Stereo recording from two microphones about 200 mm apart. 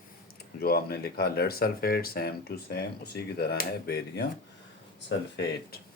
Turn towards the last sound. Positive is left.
turn(degrees=60)  # may be behind; listen again after turning